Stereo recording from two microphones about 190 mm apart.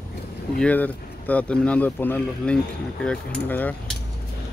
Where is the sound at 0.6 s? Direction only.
10° left (ahead or behind).